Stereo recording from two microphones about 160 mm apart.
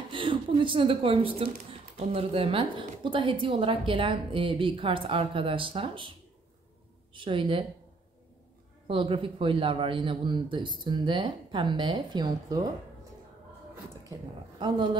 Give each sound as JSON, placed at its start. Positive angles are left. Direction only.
{"t": 0.1, "sound": "a woman's voice", "side_deg": -30}
{"t": 7.2, "sound": "a woman's voice", "side_deg": -30}
{"t": 8.8, "sound": "a woman's voice", "side_deg": -35}